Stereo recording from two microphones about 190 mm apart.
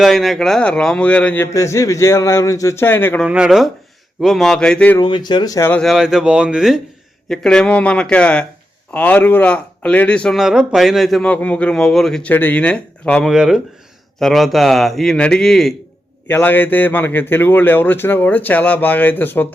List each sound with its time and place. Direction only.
0.0 s a man's voice: centre (ahead or behind)
3.2 s a man's voice: 5° right (ahead or behind)
4.9 s speech: 25° left (ahead or behind)
5.8 s a man's voice: centre (ahead or behind)